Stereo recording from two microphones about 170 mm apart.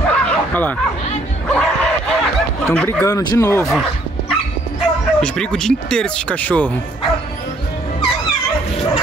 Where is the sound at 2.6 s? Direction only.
10° left (ahead or behind).